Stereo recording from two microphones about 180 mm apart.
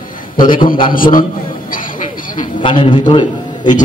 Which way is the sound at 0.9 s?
50° left (ahead or behind).